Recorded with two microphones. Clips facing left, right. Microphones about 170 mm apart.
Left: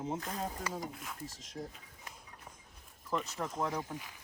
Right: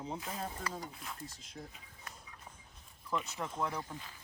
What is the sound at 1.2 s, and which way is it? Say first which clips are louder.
Speech: left 5 dB; 40° left (ahead or behind).